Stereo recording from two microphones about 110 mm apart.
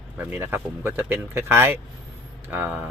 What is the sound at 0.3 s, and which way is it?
Speech, 20° right (ahead or behind).